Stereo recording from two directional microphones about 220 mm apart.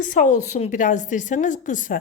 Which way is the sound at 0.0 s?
35° left (ahead or behind).